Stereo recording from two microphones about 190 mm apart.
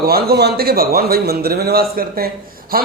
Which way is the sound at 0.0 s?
55° right (ahead or behind).